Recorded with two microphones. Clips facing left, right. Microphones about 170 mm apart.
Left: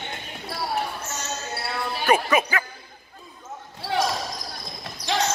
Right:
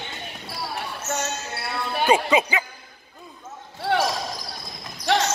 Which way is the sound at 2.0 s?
20° right (ahead or behind).